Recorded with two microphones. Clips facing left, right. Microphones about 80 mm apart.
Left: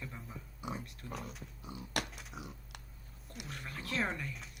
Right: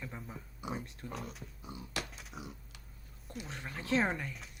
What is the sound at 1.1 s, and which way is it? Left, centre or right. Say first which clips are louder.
Speech: even; centre.